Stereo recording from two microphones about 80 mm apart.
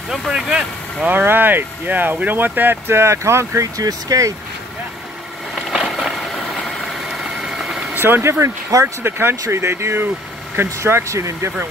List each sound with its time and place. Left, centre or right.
0.1 s speech: centre
0.5 s speech: centre; by 3.8 s right
3.8 s speech: right
5.7 s a sound: centre
7.1 s vehicle: centre
7.9 s speech: right